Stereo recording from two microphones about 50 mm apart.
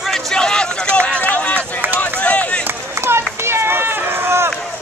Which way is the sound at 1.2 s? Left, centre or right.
Left.